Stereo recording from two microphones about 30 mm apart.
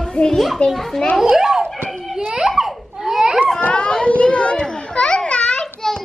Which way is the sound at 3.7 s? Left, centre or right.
Left.